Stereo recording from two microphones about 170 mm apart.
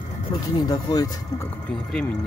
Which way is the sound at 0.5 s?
25° left (ahead or behind).